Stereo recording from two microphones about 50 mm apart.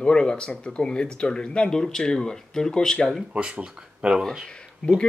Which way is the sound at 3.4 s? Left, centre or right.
Right.